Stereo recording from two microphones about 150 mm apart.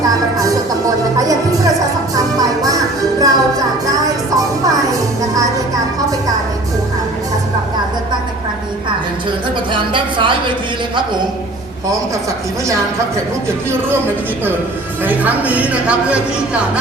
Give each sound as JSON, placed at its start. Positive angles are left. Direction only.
{"t": 2.1, "sound": "music", "side_deg": -25}
{"t": 9.7, "sound": "a woman's voice", "side_deg": -35}
{"t": 15.0, "sound": "speech", "side_deg": -10}